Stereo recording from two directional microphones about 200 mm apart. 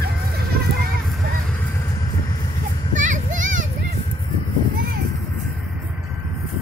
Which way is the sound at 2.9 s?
40° right (ahead or behind).